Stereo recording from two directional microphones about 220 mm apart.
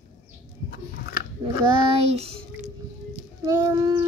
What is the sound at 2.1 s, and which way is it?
Child singing, 25° right (ahead or behind).